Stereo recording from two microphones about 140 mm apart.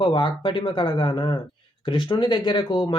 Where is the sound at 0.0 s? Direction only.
35° left (ahead or behind).